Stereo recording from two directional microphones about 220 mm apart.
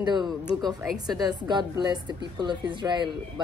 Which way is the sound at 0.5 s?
20° right (ahead or behind).